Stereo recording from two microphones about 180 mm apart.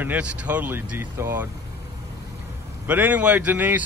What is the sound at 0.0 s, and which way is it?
Speech, 10° right (ahead or behind).